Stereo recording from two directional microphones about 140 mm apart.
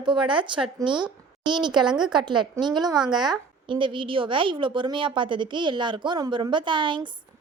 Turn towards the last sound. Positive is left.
turn(degrees=-35)  # may be behind; listen again after turning